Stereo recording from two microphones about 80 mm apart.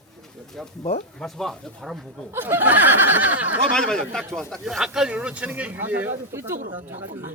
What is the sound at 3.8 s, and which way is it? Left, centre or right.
A man's voice, centre.